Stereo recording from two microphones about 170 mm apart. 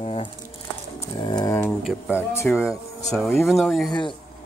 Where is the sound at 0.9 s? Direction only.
25° left (ahead or behind).